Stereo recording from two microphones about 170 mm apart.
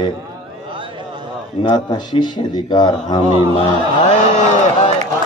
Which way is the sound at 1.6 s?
25° left (ahead or behind).